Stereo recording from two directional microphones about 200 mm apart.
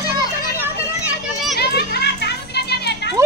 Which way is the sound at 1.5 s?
55° left (ahead or behind).